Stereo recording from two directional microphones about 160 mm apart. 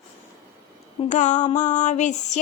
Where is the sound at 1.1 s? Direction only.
50° left (ahead or behind).